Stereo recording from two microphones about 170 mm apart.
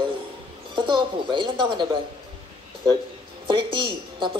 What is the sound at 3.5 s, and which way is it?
Speech, 30° right (ahead or behind).